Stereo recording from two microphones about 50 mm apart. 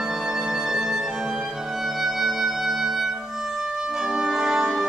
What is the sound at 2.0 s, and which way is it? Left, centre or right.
Music, centre.